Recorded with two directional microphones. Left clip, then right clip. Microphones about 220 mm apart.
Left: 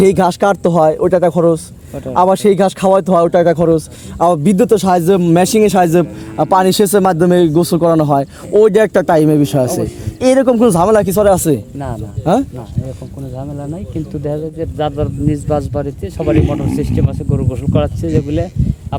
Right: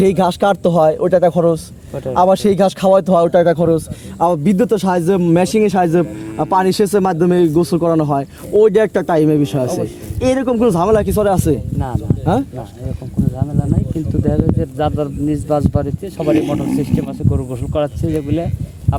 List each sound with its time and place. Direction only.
0.0 s speech: 35° left (ahead or behind)
14.3 s speech: 5° right (ahead or behind)